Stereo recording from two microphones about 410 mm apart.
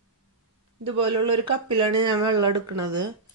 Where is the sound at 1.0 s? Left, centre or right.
Right.